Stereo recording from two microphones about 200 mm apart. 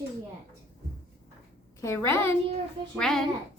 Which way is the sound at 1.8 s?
15° left (ahead or behind).